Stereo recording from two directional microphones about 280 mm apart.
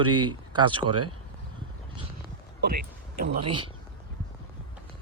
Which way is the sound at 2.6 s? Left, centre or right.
Right.